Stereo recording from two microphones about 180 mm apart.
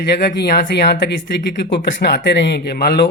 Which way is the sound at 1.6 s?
75° left (ahead or behind).